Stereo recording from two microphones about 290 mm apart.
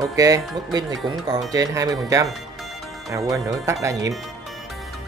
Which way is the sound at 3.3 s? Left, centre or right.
Centre.